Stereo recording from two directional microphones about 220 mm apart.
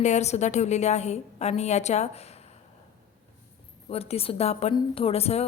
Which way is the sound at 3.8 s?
25° left (ahead or behind).